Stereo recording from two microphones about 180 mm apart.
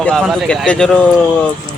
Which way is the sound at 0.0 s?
5° left (ahead or behind).